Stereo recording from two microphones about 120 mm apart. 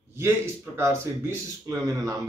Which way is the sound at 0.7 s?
25° right (ahead or behind).